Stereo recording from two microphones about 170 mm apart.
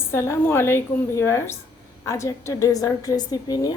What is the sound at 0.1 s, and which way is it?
A woman's voice, 15° left (ahead or behind).